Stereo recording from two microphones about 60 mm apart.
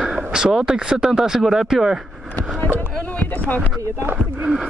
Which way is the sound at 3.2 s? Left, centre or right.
Left.